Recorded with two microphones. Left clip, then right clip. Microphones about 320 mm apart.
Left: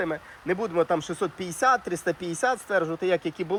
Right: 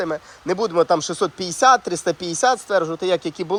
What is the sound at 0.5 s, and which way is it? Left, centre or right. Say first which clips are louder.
Speech: right 7 dB; centre.